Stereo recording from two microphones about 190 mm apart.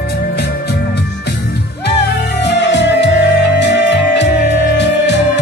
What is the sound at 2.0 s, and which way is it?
Music, 65° left (ahead or behind).